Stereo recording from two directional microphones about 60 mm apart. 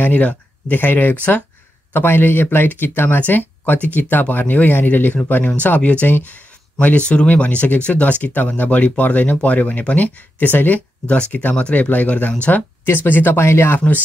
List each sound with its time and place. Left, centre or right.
0.0 s speech: left
12.8 s speech: left